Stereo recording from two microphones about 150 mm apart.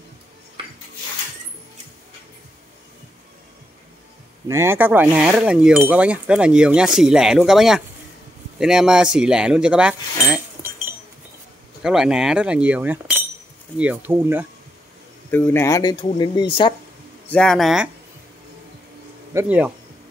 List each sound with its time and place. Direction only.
4.5 s speech: 15° right (ahead or behind)
15.3 s speech: 15° left (ahead or behind); by 16.4 s 30° left (ahead or behind)
17.3 s speech: 5° left (ahead or behind)
19.3 s speech: 10° right (ahead or behind)